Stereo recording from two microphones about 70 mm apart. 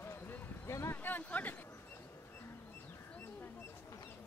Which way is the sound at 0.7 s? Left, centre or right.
Left.